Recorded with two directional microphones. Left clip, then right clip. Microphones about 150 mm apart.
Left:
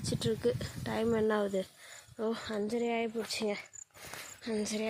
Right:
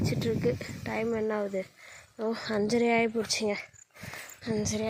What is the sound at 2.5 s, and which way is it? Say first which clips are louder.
Speech: right 11 dB; 35° right (ahead or behind).